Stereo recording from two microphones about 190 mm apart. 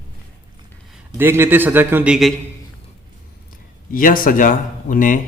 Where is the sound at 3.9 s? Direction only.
50° left (ahead or behind).